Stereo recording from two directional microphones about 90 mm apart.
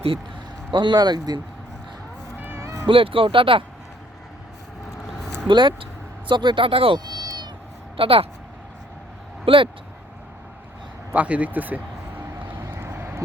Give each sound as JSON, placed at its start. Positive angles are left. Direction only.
{"t": 0.7, "sound": "speech", "side_deg": -60}
{"t": 2.4, "sound": "cat", "side_deg": -25}
{"t": 2.8, "sound": "speech", "side_deg": -80}
{"t": 5.5, "sound": "speech", "side_deg": -65}
{"t": 7.0, "sound": "cat", "side_deg": -50}
{"t": 7.9, "sound": "speech", "side_deg": -90}
{"t": 9.5, "sound": "speech", "side_deg": -75}
{"t": 11.1, "sound": "speech", "side_deg": -15}
{"t": 12.5, "sound": "vehicle", "side_deg": -30}